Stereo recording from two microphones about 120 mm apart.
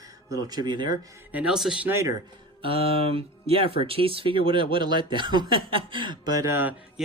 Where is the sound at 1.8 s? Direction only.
20° right (ahead or behind).